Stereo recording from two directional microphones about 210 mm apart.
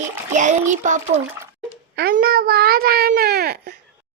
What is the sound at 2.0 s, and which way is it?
A child's voice, 50° right (ahead or behind).